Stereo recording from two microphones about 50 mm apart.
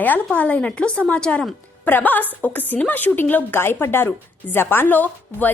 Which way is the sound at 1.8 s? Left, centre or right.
Left.